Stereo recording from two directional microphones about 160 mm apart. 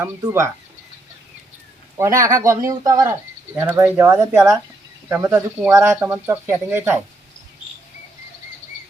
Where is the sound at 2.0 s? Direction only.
20° right (ahead or behind).